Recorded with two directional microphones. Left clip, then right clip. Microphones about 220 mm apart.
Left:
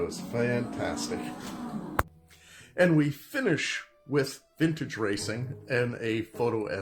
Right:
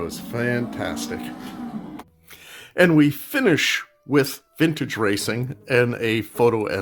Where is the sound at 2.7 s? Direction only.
50° right (ahead or behind).